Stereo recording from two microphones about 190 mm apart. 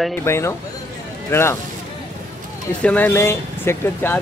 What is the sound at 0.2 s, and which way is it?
Speech, 15° left (ahead or behind).